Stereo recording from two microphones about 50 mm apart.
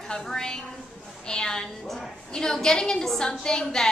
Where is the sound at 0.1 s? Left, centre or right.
Centre.